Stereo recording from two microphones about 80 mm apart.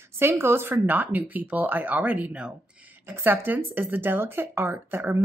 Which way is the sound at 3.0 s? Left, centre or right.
Right.